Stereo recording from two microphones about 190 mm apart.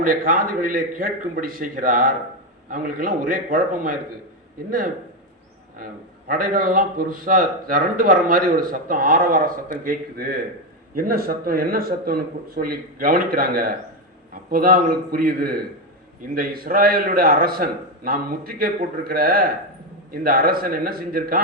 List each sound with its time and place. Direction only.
0.0 s a man's voice: 45° right (ahead or behind)
5.7 s a man's voice: 50° right (ahead or behind)